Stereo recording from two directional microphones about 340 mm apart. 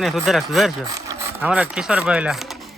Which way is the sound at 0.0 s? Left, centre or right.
Centre.